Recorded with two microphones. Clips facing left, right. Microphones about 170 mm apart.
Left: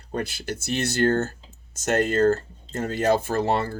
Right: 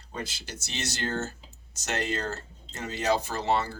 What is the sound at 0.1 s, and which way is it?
Speech, 55° left (ahead or behind).